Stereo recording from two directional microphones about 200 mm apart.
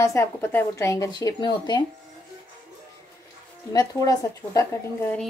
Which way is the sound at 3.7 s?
20° left (ahead or behind).